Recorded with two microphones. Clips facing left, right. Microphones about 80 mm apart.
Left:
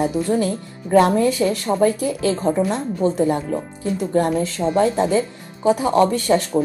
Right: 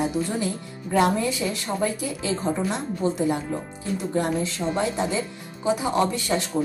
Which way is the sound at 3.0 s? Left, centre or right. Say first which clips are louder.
Left 5 dB; left.